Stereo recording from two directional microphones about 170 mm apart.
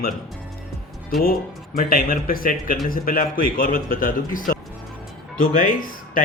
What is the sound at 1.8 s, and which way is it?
Speech, 55° left (ahead or behind).